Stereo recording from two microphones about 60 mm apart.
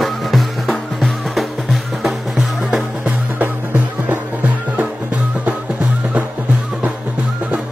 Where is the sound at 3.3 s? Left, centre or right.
Right.